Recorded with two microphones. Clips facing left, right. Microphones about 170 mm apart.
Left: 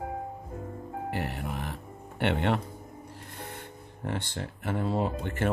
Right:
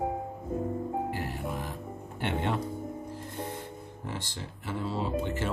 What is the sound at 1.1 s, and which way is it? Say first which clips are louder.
Music: left 1 dB; 65° left (ahead or behind).